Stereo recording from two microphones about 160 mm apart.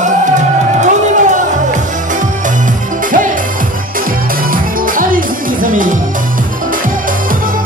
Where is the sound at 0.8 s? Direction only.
50° right (ahead or behind).